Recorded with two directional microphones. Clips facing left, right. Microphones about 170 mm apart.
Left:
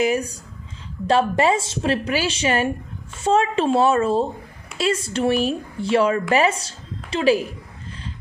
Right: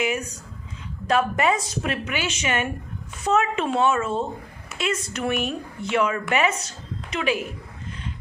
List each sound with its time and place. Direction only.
0.0 s a woman's voice: 35° left (ahead or behind)